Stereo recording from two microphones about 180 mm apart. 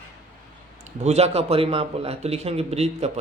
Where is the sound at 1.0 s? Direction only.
35° right (ahead or behind).